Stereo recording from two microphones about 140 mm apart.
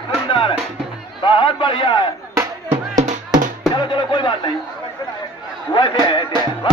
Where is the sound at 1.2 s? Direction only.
35° left (ahead or behind).